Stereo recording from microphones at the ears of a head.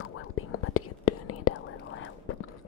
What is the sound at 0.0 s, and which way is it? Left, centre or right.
Whispering, left.